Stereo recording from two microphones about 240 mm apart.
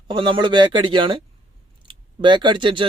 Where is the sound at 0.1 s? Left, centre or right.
Centre.